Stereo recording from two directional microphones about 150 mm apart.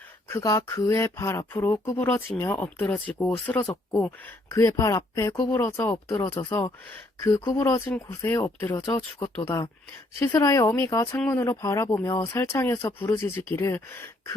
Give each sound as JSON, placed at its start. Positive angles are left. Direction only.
{"t": 0.3, "sound": "speech", "side_deg": 20}
{"t": 4.4, "sound": "speech", "side_deg": 20}
{"t": 9.0, "sound": "speech", "side_deg": 40}
{"t": 9.3, "sound": "speech", "side_deg": 10}